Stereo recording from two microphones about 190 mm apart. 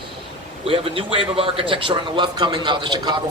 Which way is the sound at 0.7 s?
30° right (ahead or behind).